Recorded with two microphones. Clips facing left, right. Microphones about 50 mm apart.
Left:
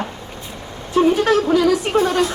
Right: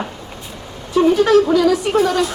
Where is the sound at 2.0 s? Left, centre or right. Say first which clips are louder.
Right 1 dB; left.